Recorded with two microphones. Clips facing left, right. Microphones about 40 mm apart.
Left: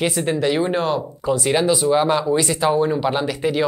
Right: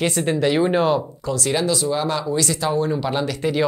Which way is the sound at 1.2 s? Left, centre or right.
Centre.